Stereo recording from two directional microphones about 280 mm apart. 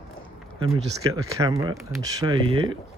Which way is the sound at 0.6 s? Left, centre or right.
Centre.